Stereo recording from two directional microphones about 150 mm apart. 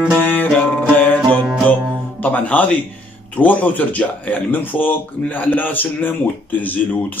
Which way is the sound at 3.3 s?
10° left (ahead or behind).